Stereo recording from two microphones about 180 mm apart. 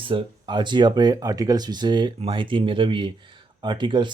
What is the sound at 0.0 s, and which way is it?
Speech, 30° right (ahead or behind).